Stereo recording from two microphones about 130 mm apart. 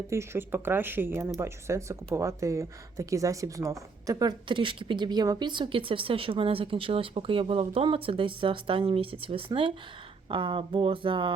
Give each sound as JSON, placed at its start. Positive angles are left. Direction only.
{"t": 0.1, "sound": "speech", "side_deg": -20}